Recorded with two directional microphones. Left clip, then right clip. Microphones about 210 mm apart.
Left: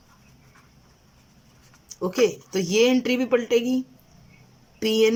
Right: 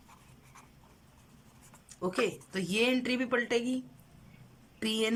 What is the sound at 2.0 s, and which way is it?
Speech, 15° left (ahead or behind).